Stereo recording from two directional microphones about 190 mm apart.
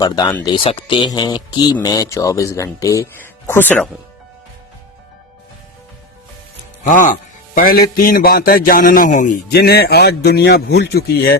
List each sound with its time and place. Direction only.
0.0 s speech: 20° left (ahead or behind)
6.8 s a man's voice: 45° left (ahead or behind)
9.5 s a man's voice: 55° left (ahead or behind)